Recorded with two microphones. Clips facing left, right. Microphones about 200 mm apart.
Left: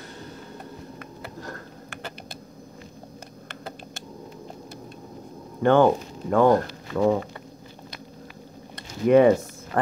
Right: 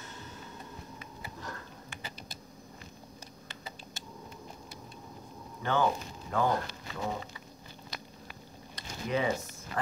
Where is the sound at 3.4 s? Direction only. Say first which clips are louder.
Left 9 dB; 60° left (ahead or behind).